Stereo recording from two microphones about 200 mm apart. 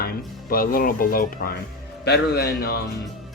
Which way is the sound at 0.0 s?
45° left (ahead or behind).